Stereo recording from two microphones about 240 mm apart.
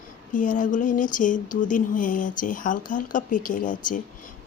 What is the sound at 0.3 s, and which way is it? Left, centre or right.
Speech, left.